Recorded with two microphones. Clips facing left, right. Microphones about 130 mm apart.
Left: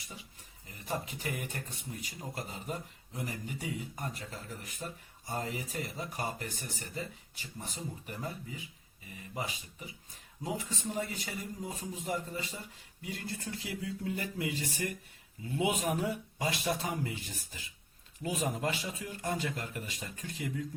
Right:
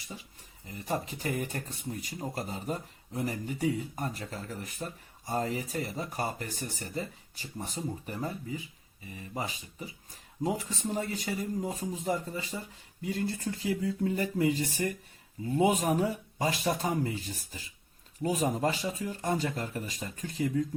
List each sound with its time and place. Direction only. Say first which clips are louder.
0.9 s speech: right 4 dB; 40° right (ahead or behind)